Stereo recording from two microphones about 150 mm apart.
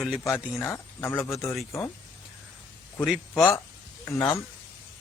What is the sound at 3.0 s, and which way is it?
Speech, centre (ahead or behind).